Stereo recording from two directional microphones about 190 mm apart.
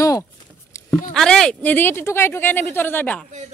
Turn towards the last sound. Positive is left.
turn(degrees=10)  # may be behind; listen again after turning